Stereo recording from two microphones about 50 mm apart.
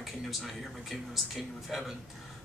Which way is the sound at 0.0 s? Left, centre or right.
Centre.